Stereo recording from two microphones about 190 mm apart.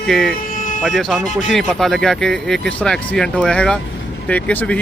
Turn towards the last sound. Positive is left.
turn(degrees=5)  # may be behind; listen again after turning